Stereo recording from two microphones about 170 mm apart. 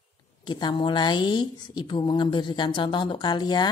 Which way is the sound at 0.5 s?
25° left (ahead or behind).